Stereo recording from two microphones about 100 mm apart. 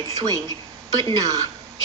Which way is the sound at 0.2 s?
40° right (ahead or behind).